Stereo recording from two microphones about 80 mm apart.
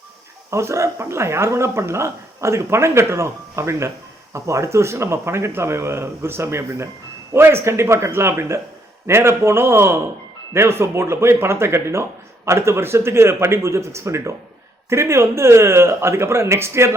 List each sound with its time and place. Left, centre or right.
0.5 s speech: right